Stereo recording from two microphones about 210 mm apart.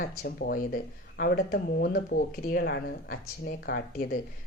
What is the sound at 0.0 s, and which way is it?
Speech, 40° left (ahead or behind).